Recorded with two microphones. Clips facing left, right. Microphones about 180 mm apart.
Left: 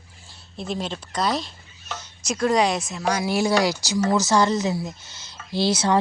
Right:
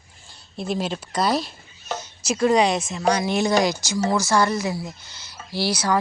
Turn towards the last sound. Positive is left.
turn(degrees=25)  # may be behind; listen again after turning